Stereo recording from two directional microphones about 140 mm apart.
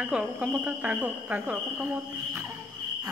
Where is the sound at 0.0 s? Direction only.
10° right (ahead or behind).